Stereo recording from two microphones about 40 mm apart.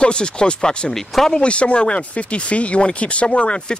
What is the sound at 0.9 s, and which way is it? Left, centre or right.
Speech, centre.